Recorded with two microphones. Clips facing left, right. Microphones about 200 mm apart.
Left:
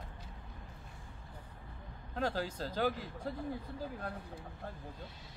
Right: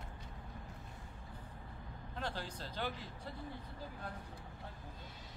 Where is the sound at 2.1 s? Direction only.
45° left (ahead or behind).